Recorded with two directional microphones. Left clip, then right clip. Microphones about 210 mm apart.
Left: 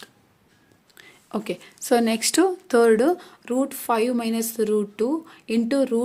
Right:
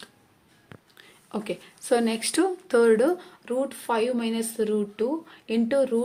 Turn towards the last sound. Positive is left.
turn(degrees=30)  # may be behind; listen again after turning